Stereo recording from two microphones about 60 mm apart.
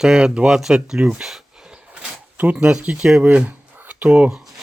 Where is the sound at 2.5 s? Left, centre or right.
Centre.